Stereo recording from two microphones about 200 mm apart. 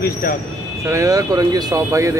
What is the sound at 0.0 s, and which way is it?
Speech, 45° left (ahead or behind).